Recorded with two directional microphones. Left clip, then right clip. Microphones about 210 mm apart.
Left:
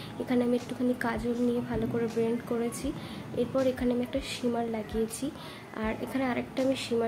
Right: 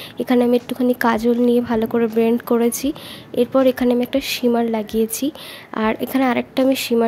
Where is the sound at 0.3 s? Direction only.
50° right (ahead or behind).